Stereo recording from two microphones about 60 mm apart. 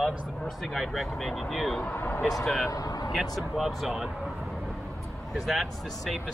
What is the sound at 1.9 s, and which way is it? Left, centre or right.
Speech, left.